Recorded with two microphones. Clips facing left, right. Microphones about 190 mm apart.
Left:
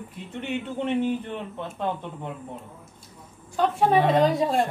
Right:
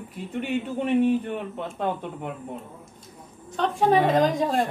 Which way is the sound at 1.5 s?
15° right (ahead or behind).